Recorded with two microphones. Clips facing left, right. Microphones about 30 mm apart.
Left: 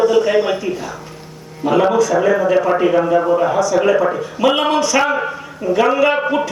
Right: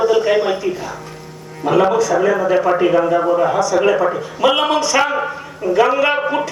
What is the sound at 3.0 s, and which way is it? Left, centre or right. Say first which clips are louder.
A man's voice: even; centre.